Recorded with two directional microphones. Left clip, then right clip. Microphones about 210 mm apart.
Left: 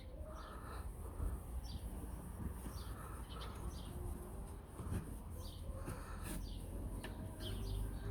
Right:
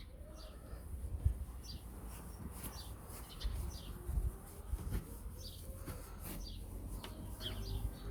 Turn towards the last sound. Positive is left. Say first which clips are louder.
# right 4 dB
turn(degrees=0)  # may be behind; listen again after turning